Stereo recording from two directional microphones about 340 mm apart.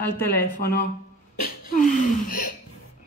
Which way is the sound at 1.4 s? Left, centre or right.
Left.